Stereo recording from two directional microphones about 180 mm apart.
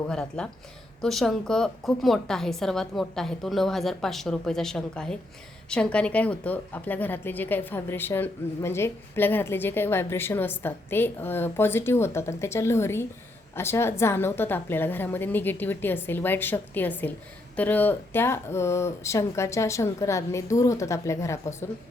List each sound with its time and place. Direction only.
0.1 s a woman's voice: 5° left (ahead or behind)